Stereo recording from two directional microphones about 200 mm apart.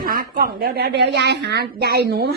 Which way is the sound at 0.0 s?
45° right (ahead or behind).